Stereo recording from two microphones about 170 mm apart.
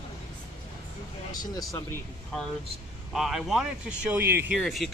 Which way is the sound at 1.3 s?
20° left (ahead or behind).